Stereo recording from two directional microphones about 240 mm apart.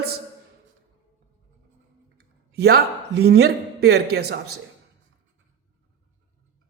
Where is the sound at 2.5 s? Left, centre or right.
Right.